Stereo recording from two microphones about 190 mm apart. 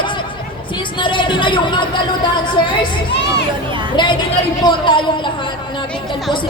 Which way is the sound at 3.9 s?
25° left (ahead or behind).